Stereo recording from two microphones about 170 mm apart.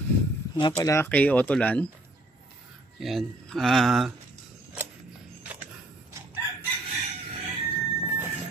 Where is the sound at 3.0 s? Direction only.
Centre (ahead or behind).